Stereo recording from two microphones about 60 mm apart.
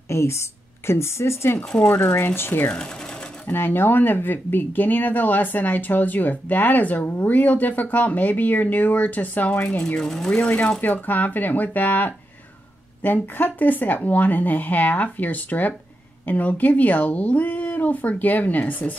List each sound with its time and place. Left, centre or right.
0.1 s speech: left
1.8 s speech: left
9.9 s speech: centre
10.8 s speech: left